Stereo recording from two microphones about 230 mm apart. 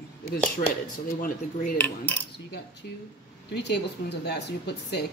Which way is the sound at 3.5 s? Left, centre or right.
Left.